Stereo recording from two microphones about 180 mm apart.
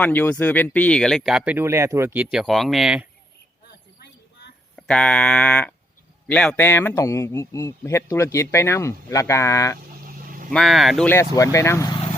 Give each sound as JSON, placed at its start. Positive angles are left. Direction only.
{"t": 0.0, "sound": "speech", "side_deg": 10}
{"t": 4.8, "sound": "a man's voice", "side_deg": 5}
{"t": 10.0, "sound": "vehicle", "side_deg": -50}
{"t": 10.5, "sound": "speech", "side_deg": 0}
{"t": 11.1, "sound": "a man's voice", "side_deg": 15}